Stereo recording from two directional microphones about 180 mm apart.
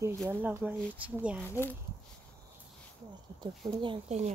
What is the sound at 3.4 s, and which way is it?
Speech, 25° right (ahead or behind).